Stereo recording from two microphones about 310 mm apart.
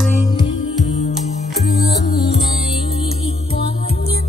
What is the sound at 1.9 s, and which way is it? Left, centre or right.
Music, left.